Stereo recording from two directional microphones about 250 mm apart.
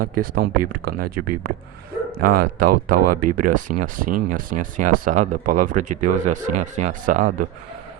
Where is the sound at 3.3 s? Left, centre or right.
Right.